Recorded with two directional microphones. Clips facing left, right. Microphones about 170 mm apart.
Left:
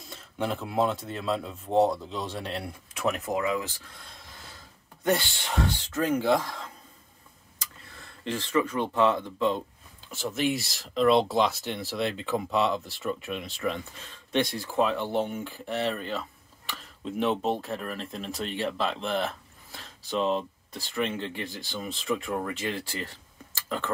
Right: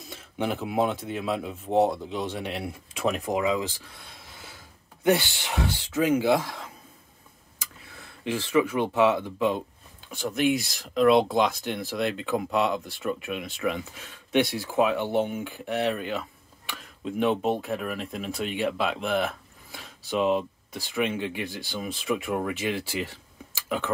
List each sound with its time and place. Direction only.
0.5 s speech: centre (ahead or behind)
1.0 s speech: 15° right (ahead or behind)
4.0 s a sound: 5° right (ahead or behind)
5.0 s speech: 5° right (ahead or behind)
10.1 s speech: centre (ahead or behind)
21.5 s speech: centre (ahead or behind)